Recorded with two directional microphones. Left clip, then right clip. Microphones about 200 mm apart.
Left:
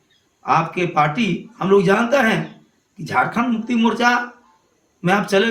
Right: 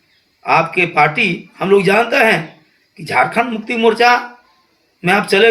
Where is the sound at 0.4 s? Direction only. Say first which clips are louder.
Right 5 dB; 15° left (ahead or behind).